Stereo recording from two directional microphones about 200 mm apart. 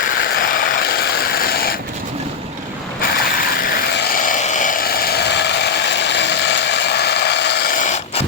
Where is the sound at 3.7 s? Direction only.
45° left (ahead or behind).